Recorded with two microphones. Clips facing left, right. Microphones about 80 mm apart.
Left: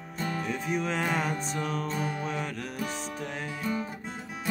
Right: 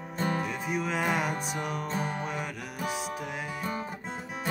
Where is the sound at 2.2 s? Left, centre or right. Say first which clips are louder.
Left 1 dB; centre.